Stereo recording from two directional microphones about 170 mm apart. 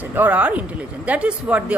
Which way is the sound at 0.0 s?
10° right (ahead or behind).